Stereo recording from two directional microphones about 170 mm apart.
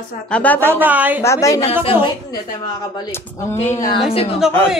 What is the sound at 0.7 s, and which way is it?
Speech, 10° right (ahead or behind).